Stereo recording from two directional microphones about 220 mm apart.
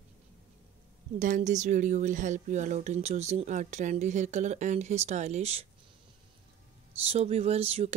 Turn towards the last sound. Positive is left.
turn(degrees=-25)  # may be behind; listen again after turning